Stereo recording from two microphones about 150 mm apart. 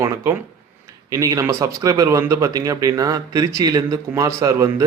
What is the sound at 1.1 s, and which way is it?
Speech, 20° right (ahead or behind).